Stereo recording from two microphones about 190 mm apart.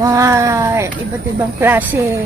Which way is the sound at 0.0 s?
15° right (ahead or behind).